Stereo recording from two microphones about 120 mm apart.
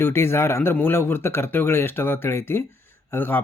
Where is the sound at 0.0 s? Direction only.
20° left (ahead or behind).